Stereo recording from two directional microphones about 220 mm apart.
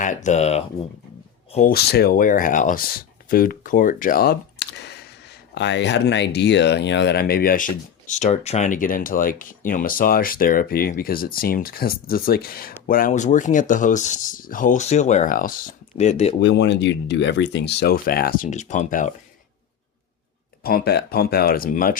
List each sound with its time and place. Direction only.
0.0 s speech: 35° left (ahead or behind)
1.5 s speech: 40° left (ahead or behind)
16.4 s speech: 50° left (ahead or behind); by 19.1 s 35° left (ahead or behind)
20.7 s speech: 45° left (ahead or behind)